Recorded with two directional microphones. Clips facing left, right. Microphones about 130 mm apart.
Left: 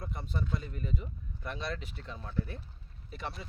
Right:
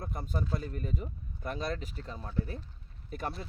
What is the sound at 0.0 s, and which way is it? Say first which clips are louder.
Speech: right 2 dB; 45° right (ahead or behind).